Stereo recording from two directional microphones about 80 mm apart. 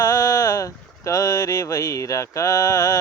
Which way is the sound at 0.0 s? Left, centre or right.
Left.